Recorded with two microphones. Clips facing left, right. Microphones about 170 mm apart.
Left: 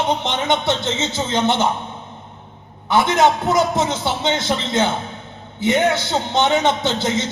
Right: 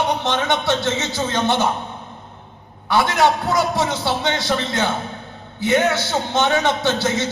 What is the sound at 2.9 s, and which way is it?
A man's voice, 20° left (ahead or behind).